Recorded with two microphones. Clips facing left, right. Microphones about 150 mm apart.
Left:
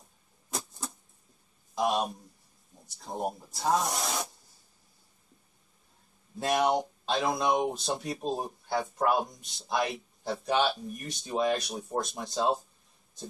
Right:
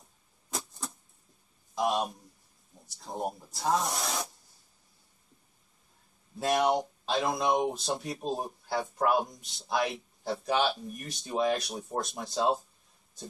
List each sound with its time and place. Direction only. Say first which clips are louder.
0.5 s a sound: left 1 dB; centre (ahead or behind)
2.9 s speech: left 1 dB; centre (ahead or behind)
6.4 s speech: even; centre (ahead or behind)